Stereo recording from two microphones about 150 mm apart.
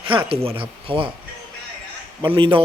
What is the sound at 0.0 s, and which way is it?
Speech, 35° right (ahead or behind).